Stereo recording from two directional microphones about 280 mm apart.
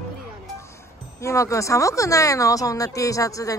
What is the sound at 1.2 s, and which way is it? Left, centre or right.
Speech, centre.